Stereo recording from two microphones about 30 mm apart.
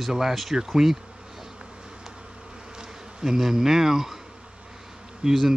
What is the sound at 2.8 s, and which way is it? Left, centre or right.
Bee, right.